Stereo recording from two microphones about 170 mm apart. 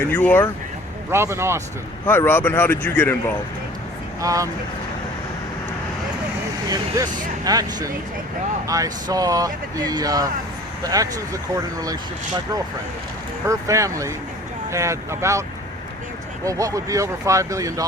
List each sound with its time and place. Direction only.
0.1 s speech: 10° left (ahead or behind)
1.1 s speech: 15° right (ahead or behind)
2.0 s speech: 15° left (ahead or behind)
4.2 s speech: 20° right (ahead or behind)
6.7 s speech: 20° right (ahead or behind)
13.4 s speech: 20° right (ahead or behind)